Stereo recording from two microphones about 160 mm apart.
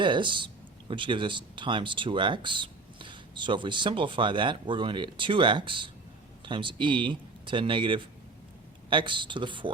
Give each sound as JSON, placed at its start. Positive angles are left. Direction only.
{"t": 0.0, "sound": "speech", "side_deg": -30}